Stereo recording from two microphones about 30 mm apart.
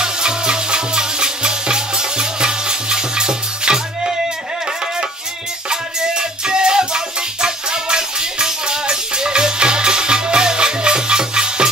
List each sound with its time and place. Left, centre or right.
0.0 s music: right
5.7 s music: right